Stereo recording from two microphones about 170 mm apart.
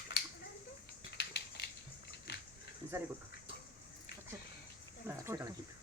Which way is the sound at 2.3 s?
80° left.